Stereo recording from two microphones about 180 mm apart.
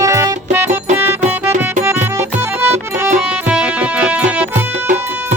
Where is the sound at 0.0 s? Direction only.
15° right (ahead or behind).